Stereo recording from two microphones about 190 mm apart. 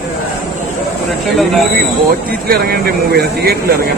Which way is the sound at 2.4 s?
50° right (ahead or behind).